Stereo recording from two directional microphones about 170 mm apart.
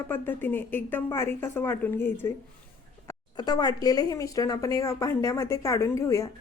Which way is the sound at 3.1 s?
25° left (ahead or behind).